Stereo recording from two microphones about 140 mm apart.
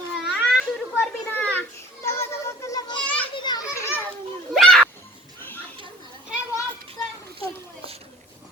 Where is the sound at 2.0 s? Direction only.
20° left (ahead or behind).